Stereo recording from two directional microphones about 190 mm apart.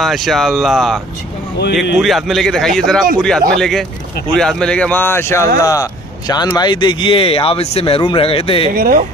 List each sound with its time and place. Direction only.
0.0 s a man's voice: centre (ahead or behind); by 8.7 s 30° left (ahead or behind)
8.7 s speech: 50° right (ahead or behind)